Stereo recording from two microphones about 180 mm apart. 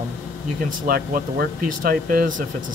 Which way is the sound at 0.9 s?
55° right (ahead or behind).